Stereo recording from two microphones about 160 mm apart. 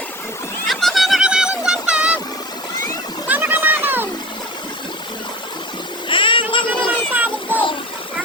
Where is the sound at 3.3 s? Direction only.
10° right (ahead or behind).